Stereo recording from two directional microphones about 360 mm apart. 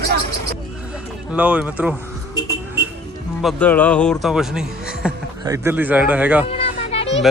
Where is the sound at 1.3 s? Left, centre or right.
Centre.